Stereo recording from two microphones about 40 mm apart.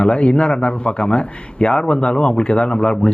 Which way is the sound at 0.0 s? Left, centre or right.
Left.